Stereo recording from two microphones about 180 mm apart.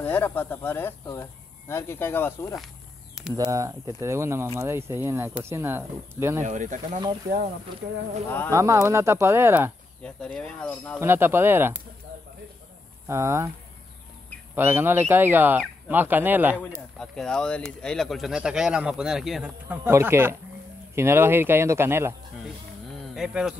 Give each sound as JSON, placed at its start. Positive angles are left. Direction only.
{"t": 0.0, "sound": "speech", "side_deg": 10}
{"t": 3.2, "sound": "a sound", "side_deg": 0}
{"t": 3.5, "sound": "speech", "side_deg": -20}
{"t": 6.4, "sound": "speech", "side_deg": -45}
{"t": 8.5, "sound": "speech", "side_deg": -15}
{"t": 10.0, "sound": "speech", "side_deg": 5}
{"t": 11.0, "sound": "speech", "side_deg": -10}
{"t": 13.0, "sound": "speech", "side_deg": -15}
{"t": 14.5, "sound": "speech", "side_deg": -10}
{"t": 17.0, "sound": "speech", "side_deg": 5}
{"t": 22.8, "sound": "a sound", "side_deg": -5}